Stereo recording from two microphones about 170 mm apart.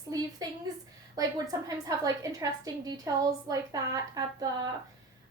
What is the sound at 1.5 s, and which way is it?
A woman's voice, 20° right (ahead or behind).